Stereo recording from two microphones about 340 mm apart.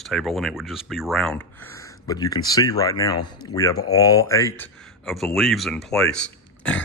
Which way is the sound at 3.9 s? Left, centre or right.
Centre.